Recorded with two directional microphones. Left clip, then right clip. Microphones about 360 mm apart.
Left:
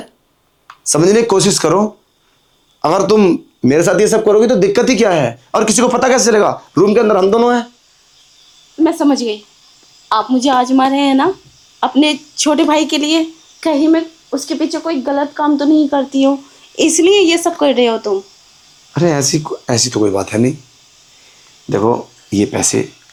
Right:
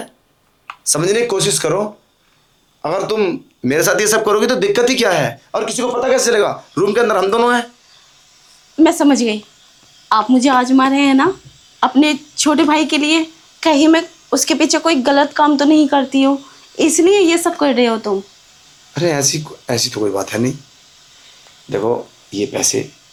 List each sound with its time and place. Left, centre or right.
0.9 s speech: left
2.8 s speech: left
3.7 s speech: centre
5.5 s speech: left
6.1 s speech: left
6.8 s speech: centre
8.8 s a woman's voice: right
18.9 s speech: centre
21.7 s speech: left